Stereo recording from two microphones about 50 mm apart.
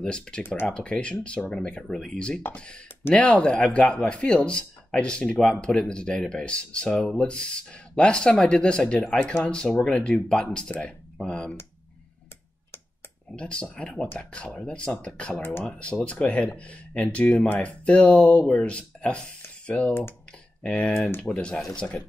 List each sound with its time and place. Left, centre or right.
0.0 s a man's voice: centre
13.4 s a man's voice: left